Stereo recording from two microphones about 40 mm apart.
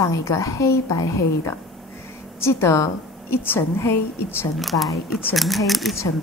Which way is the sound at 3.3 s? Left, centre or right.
Left.